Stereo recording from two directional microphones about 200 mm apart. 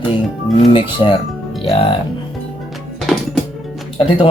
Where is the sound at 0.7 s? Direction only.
25° left (ahead or behind).